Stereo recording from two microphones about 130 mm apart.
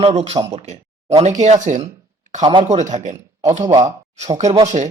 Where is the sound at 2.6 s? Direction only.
65° right (ahead or behind).